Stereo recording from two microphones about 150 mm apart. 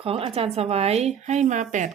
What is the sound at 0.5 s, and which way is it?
Speech, 45° right (ahead or behind).